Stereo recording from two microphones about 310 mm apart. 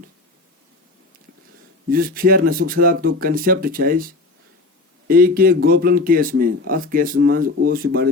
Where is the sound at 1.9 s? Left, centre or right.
Right.